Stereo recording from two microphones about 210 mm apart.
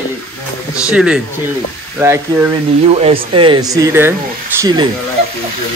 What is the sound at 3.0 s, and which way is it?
Speech, 25° right (ahead or behind).